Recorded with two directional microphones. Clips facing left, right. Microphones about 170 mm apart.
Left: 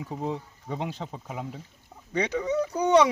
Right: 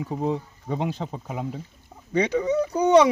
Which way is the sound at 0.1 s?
70° right (ahead or behind).